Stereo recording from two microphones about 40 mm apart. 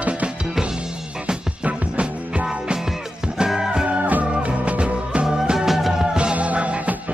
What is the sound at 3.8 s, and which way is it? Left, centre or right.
Music, right.